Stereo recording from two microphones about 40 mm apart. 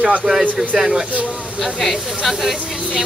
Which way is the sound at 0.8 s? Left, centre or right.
Right.